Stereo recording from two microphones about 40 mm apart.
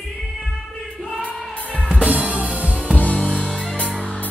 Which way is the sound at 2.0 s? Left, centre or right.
Right.